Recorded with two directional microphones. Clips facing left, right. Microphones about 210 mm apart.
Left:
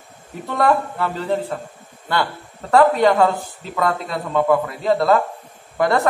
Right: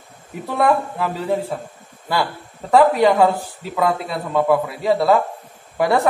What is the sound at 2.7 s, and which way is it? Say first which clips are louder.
Speech: even; 5° right (ahead or behind).